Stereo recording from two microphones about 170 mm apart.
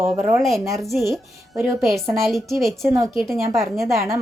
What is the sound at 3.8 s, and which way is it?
Speech, 15° right (ahead or behind).